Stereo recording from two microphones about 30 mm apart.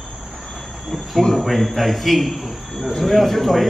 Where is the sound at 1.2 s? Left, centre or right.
Left.